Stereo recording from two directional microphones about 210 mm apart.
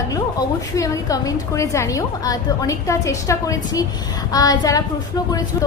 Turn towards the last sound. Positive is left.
turn(degrees=20)  # may be behind; listen again after turning